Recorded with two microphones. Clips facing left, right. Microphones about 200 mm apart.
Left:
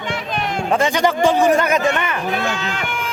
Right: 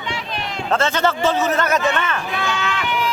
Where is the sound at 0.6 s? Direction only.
15° left (ahead or behind).